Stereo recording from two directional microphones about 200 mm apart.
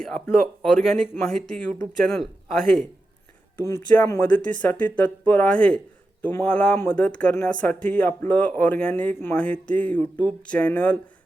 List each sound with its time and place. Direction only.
0.6 s speech: 5° left (ahead or behind)
3.7 s speech: 10° left (ahead or behind)